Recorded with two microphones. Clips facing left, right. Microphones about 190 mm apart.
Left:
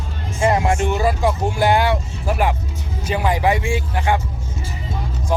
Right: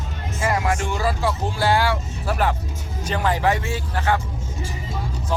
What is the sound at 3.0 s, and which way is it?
Speech, 10° left (ahead or behind).